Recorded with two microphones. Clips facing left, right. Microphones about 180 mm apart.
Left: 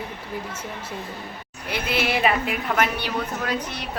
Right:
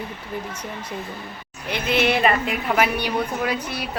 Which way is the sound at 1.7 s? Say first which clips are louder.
Right 4 dB; 5° left (ahead or behind).